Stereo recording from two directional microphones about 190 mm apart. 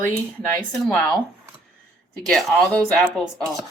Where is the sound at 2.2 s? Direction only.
5° left (ahead or behind).